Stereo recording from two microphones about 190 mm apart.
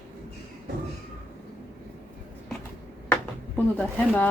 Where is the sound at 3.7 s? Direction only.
5° left (ahead or behind).